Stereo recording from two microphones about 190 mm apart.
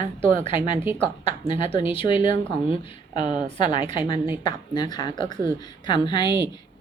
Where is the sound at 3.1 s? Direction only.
40° right (ahead or behind).